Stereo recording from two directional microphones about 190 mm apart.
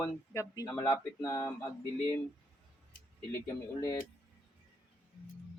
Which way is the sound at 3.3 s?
15° left (ahead or behind).